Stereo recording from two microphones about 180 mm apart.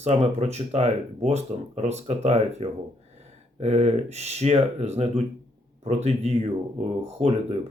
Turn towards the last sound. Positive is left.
turn(degrees=-35)  # may be behind; listen again after turning